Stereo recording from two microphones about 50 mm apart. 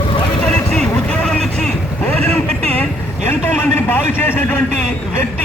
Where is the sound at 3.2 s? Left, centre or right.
Left.